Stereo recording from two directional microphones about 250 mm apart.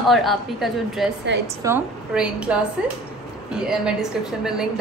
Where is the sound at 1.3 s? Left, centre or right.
Right.